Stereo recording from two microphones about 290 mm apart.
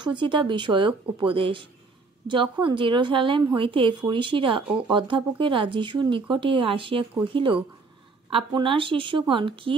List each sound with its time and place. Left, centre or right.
0.0 s speech: centre